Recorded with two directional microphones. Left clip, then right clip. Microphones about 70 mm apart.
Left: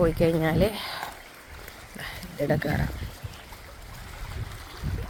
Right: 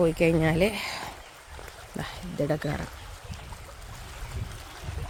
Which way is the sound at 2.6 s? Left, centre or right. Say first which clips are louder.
Left 3 dB; centre.